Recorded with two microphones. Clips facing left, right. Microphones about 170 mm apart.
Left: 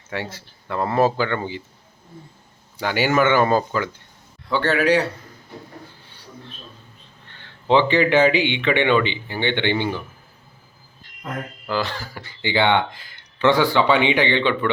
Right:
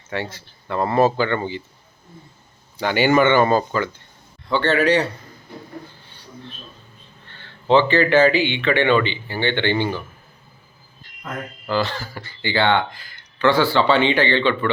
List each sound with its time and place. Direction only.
0.1 s speech: 10° left (ahead or behind)
2.7 s speech: 5° left (ahead or behind)
7.3 s speech: 15° left (ahead or behind)
11.7 s speech: 10° left (ahead or behind)